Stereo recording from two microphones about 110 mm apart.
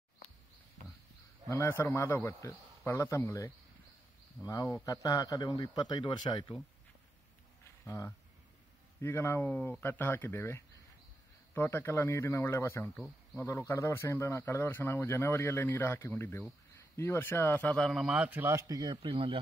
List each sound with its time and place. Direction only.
1.5 s a man's voice: 25° left (ahead or behind); by 6.5 s 45° left (ahead or behind)
7.6 s a sound: 30° left (ahead or behind)
9.0 s speech: 25° left (ahead or behind)
17.7 s a man's voice: centre (ahead or behind); by 18.9 s 35° right (ahead or behind)
19.0 s speech: 55° right (ahead or behind)